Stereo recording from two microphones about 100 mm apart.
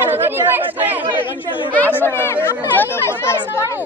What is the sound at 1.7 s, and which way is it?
Speech, 15° left (ahead or behind).